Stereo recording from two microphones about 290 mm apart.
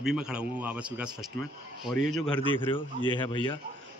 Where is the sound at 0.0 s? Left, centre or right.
Centre.